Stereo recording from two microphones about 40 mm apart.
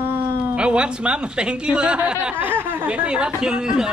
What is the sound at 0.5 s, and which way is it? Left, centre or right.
Speech, right.